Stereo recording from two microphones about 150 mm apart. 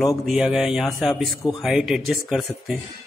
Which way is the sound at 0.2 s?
5° right (ahead or behind).